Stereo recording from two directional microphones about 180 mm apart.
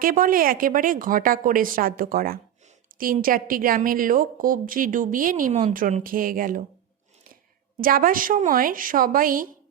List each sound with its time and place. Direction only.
0.0 s a woman's voice: 50° right (ahead or behind)
7.8 s a woman's voice: 50° right (ahead or behind)